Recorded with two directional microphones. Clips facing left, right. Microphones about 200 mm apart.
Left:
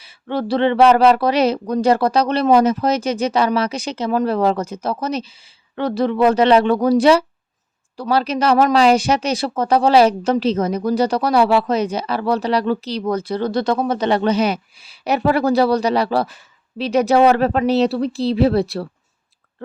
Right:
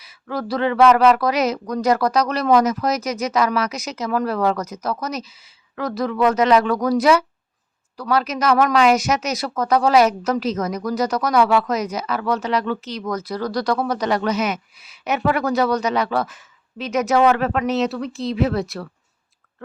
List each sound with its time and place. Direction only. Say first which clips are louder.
0.0 s speech: left 4 dB; 30° left (ahead or behind)